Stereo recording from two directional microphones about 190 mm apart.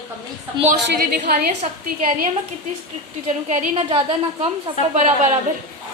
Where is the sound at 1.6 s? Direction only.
40° right (ahead or behind).